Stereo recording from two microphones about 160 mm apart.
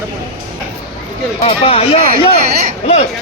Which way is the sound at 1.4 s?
40° left (ahead or behind).